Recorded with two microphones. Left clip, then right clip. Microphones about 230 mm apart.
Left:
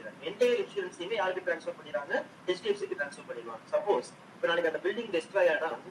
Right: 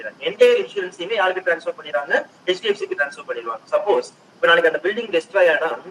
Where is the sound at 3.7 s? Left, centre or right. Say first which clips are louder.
Right 10 dB; right.